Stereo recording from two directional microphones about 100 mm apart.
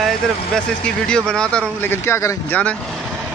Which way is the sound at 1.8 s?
25° left (ahead or behind).